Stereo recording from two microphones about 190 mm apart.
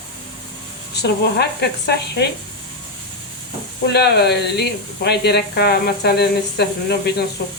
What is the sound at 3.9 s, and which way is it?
Speech, 60° left (ahead or behind).